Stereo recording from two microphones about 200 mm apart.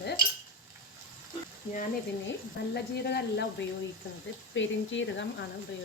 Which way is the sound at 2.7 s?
55° left (ahead or behind).